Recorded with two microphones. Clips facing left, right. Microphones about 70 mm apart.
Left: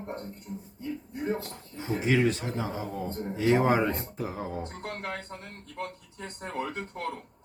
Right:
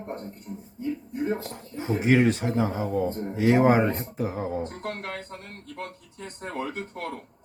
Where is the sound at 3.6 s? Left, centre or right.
Right.